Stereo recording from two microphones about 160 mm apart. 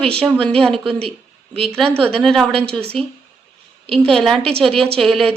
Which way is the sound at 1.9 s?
35° right (ahead or behind).